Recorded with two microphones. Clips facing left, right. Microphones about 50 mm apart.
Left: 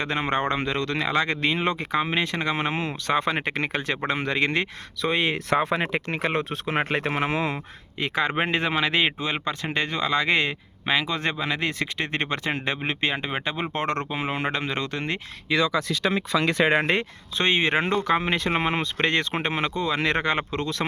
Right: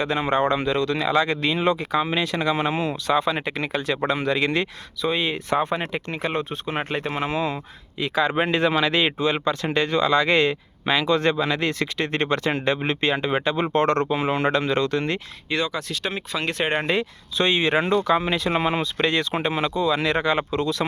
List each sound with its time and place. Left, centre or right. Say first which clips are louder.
0.0 s speech: right 3 dB; left
3.8 s speech: right 3 dB; left
5.0 s speech: even; left
5.8 s speech: left 1 dB; left
7.9 s speech: right 3 dB; left
8.3 s speech: right 3 dB; left
16.8 s speech: right 1 dB; left